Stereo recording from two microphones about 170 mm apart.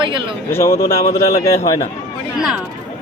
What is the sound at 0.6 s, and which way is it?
Speech, 35° left (ahead or behind).